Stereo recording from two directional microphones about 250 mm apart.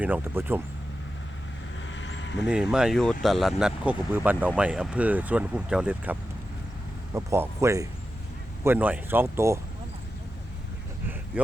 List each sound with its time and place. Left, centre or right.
0.0 s speech: centre
1.9 s vehicle: left
2.5 s speech: centre
11.3 s speech: centre